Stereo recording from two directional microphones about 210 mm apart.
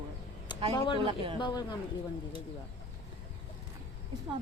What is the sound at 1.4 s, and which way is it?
Speech, 20° left (ahead or behind).